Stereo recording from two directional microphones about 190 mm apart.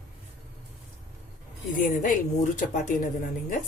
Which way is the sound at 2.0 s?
40° left (ahead or behind).